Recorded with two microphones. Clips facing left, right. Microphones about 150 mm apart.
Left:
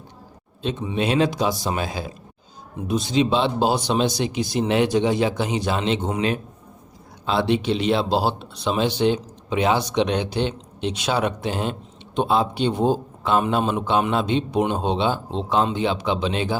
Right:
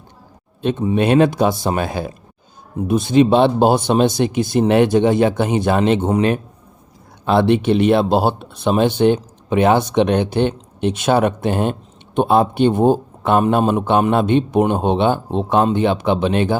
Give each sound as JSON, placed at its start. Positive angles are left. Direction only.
{"t": 0.6, "sound": "speech", "side_deg": -55}